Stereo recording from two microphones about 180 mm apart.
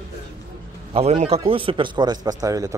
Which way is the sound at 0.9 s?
35° right (ahead or behind).